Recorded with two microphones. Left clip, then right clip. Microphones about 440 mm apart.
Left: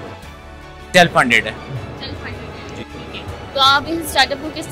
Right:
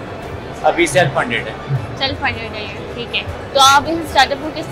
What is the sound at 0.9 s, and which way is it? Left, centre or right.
Speech, left.